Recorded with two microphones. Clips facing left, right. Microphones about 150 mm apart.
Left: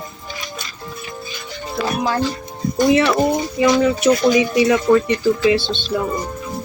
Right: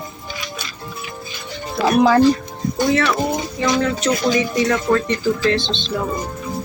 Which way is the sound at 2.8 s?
15° left (ahead or behind).